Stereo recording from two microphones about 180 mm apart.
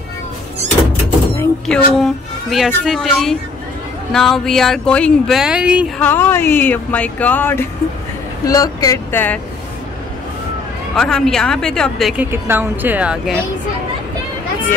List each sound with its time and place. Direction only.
1.3 s speech: 15° left (ahead or behind)
2.0 s speech: centre (ahead or behind)
5.9 s speech: 10° left (ahead or behind)
11.0 s speech: 5° left (ahead or behind)
12.3 s speech: 10° right (ahead or behind)